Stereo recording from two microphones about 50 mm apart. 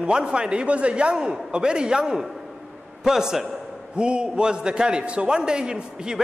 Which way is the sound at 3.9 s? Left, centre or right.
Centre.